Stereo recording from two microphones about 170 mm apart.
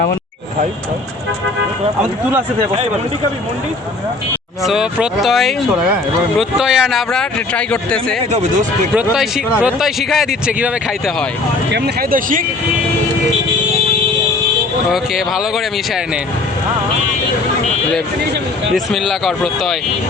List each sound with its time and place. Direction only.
2.0 s speech: 10° right (ahead or behind)
4.6 s speech: 5° right (ahead or behind)
6.6 s speech: 5° right (ahead or behind)
8.3 s speech: 45° right (ahead or behind)
9.0 s speech: 5° right (ahead or behind)
11.7 s speech: 60° right (ahead or behind)
14.8 s speech: centre (ahead or behind)
18.7 s speech: centre (ahead or behind)